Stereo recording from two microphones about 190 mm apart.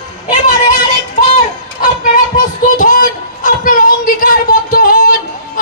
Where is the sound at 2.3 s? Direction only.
45° left (ahead or behind).